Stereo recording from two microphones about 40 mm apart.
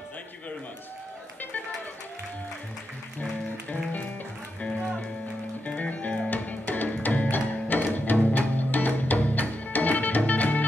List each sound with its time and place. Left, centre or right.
3.2 s music: left
5.8 s music: left